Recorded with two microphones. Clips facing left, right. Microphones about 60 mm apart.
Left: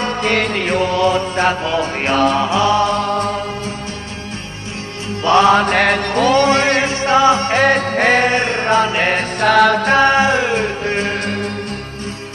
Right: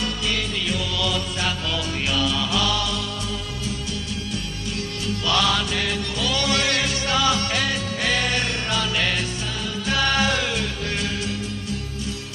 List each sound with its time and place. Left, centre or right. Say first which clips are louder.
0.0 s music: left 9 dB; left
5.2 s music: left 12 dB; left
7.6 s music: left 11 dB; left
9.4 s music: left 18 dB; left
9.8 s music: left 9 dB; left